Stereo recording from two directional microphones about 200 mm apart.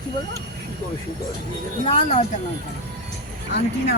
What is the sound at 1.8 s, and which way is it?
Speech, 30° left (ahead or behind).